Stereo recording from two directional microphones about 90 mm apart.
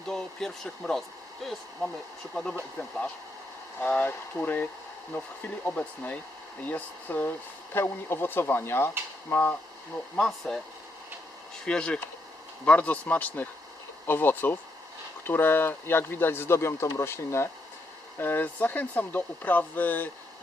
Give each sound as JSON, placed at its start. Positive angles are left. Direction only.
{"t": 0.1, "sound": "speech", "side_deg": 5}
{"t": 3.8, "sound": "speech", "side_deg": 15}
{"t": 10.2, "sound": "speech", "side_deg": 5}
{"t": 11.6, "sound": "speech", "side_deg": 10}